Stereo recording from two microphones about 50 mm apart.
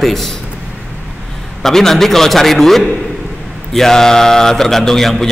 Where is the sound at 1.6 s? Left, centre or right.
Centre.